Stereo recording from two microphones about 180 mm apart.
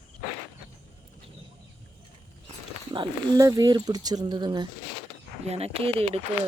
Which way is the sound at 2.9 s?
20° right (ahead or behind).